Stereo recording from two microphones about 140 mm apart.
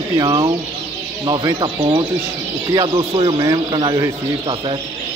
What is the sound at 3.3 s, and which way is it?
Speech, 30° right (ahead or behind).